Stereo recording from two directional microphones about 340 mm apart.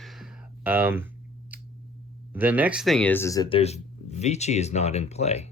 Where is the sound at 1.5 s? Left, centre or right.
Centre.